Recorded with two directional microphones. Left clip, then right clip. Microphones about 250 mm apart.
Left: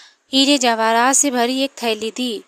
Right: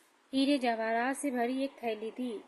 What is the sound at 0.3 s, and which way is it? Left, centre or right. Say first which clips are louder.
A woman's voice: left 15 dB; left.